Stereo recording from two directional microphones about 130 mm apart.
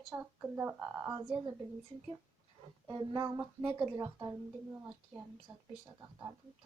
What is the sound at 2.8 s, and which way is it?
Speech, 30° right (ahead or behind).